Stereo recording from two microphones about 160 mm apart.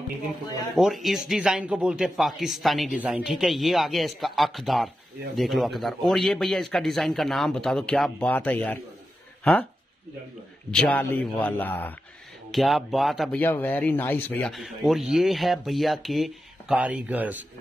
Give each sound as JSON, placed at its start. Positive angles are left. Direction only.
{"t": 0.7, "sound": "speech", "side_deg": 0}
{"t": 10.7, "sound": "a man's voice", "side_deg": 5}
{"t": 12.4, "sound": "speech", "side_deg": 0}
{"t": 13.4, "sound": "a man's voice", "side_deg": 10}
{"t": 14.5, "sound": "speech", "side_deg": 0}